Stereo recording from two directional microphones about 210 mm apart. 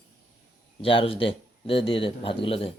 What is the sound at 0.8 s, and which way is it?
Speech, 25° left (ahead or behind).